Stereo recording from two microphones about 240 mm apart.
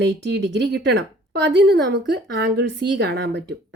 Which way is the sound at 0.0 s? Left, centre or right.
Right.